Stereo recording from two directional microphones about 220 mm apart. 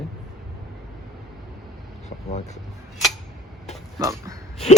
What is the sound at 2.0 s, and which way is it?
Vehicle, 30° left (ahead or behind).